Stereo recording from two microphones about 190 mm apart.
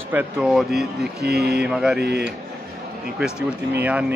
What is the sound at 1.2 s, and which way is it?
Speech, 55° right (ahead or behind).